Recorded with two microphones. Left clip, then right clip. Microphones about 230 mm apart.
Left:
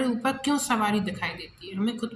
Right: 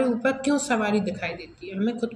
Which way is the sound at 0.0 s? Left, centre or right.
Left.